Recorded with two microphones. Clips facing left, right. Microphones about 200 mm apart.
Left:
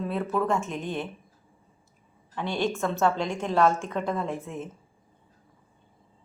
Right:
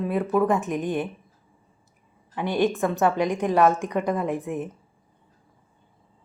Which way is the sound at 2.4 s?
15° right (ahead or behind).